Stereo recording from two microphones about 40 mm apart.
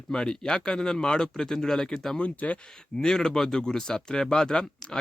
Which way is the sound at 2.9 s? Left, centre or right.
Centre.